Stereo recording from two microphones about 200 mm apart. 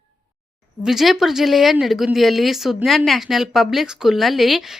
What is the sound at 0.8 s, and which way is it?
Speech, centre (ahead or behind).